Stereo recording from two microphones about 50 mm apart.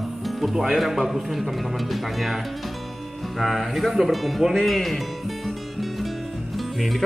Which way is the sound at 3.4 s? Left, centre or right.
Centre.